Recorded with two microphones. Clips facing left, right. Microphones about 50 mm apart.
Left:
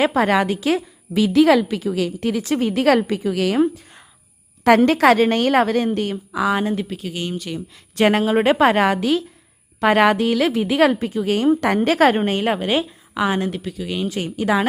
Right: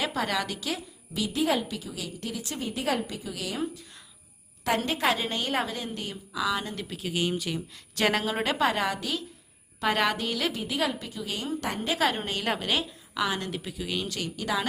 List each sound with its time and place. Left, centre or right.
0.2 s a woman's voice: left
1.3 s a woman's voice: left
1.7 s a woman's voice: left
4.6 s a woman's voice: left
6.8 s speech: centre
7.9 s speech: left
8.4 s a woman's voice: left
9.9 s speech: left
10.6 s a woman's voice: left
11.6 s a woman's voice: left
12.1 s speech: left
12.5 s a woman's voice: left
13.7 s speech: centre
14.1 s speech: left